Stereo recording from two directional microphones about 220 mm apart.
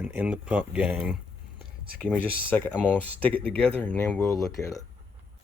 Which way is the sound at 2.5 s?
10° left (ahead or behind).